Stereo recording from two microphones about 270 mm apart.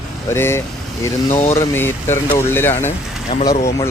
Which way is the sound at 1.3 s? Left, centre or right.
Left.